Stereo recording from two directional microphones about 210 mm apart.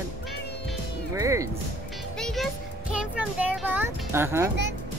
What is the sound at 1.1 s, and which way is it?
Speech, 15° right (ahead or behind).